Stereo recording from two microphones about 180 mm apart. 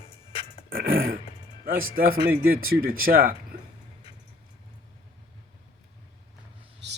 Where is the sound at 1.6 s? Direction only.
50° right (ahead or behind).